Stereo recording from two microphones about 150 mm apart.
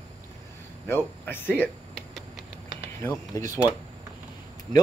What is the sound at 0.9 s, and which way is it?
Speech, 15° left (ahead or behind).